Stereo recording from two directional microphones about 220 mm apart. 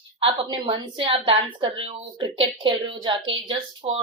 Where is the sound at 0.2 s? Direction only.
20° right (ahead or behind).